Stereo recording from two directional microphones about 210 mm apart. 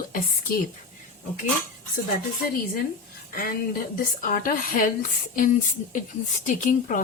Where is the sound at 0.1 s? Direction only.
40° left (ahead or behind).